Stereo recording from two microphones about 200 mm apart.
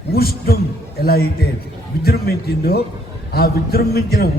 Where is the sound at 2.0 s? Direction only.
50° left (ahead or behind).